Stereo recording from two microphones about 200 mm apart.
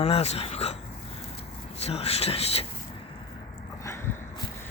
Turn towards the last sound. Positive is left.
turn(degrees=15)  # may be behind; listen again after turning